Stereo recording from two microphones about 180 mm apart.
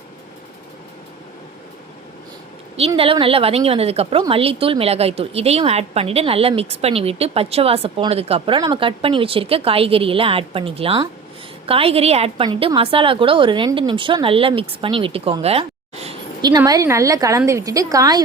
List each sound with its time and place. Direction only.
2.7 s a woman's voice: 30° right (ahead or behind)
16.4 s a woman's voice: 20° right (ahead or behind)